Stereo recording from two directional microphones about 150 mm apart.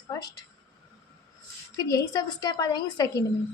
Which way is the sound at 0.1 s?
25° left (ahead or behind).